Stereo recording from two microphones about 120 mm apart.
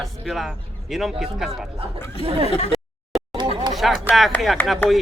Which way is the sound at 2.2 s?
50° right (ahead or behind).